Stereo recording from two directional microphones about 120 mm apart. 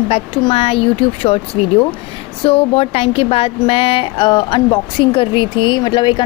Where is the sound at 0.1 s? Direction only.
50° left (ahead or behind).